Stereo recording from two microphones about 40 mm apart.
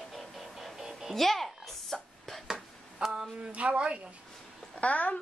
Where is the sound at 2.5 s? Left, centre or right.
Centre.